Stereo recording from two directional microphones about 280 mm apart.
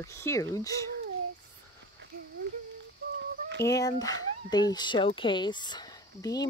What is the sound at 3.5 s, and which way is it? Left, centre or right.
Speech, centre.